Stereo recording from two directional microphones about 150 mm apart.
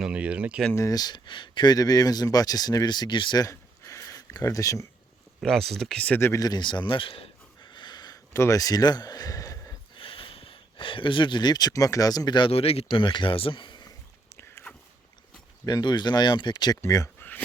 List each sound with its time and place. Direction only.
0.0 s speech: 5° right (ahead or behind)
0.8 s speech: 25° left (ahead or behind)
5.4 s speech: centre (ahead or behind); by 10.0 s 25° left (ahead or behind)
10.0 s speech: 35° left (ahead or behind)
14.3 s a sound: 15° left (ahead or behind)
15.6 s speech: 30° left (ahead or behind)
16.8 s a sound: 20° left (ahead or behind)